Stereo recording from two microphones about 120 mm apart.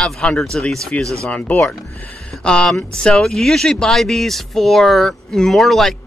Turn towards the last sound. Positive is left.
turn(degrees=0)  # may be behind; listen again after turning